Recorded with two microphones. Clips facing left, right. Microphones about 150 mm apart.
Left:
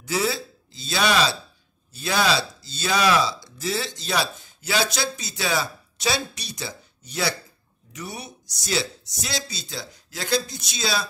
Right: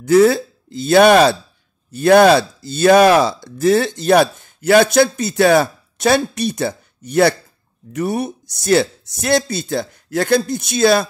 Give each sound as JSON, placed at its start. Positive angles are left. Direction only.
{"t": 0.0, "sound": "speech", "side_deg": -55}